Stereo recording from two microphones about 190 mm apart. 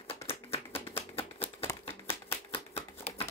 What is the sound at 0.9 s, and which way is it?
Shuffling cards, 30° left (ahead or behind).